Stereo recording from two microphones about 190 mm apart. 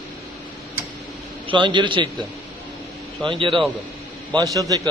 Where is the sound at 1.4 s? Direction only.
25° right (ahead or behind).